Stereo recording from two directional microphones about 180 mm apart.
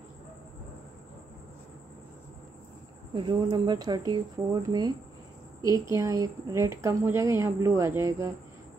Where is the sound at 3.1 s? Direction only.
25° right (ahead or behind).